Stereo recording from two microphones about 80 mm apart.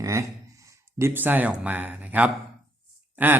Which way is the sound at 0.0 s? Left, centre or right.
Right.